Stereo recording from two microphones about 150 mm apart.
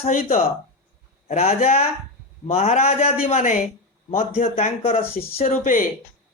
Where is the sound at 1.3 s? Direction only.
45° left (ahead or behind).